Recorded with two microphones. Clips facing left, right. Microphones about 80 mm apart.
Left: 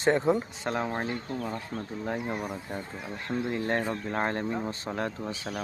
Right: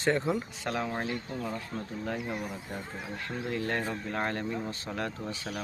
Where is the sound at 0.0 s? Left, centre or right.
Left.